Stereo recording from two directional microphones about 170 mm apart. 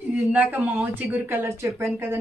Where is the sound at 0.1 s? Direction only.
10° right (ahead or behind).